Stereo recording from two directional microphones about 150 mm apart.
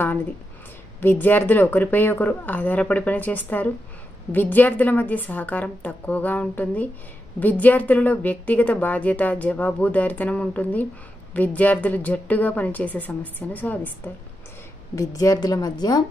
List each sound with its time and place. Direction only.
1.0 s speech: 10° left (ahead or behind)
15.0 s a woman's voice: 20° left (ahead or behind)